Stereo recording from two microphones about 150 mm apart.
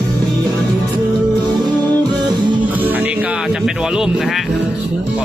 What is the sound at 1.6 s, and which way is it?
Music, 30° right (ahead or behind).